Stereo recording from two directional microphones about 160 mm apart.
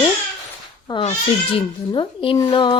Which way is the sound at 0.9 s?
25° left (ahead or behind).